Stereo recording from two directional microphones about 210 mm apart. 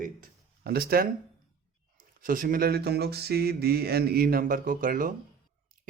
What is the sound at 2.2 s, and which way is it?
A man's voice, 40° right (ahead or behind).